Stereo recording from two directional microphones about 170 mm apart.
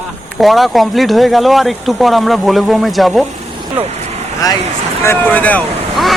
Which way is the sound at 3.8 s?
40° right (ahead or behind).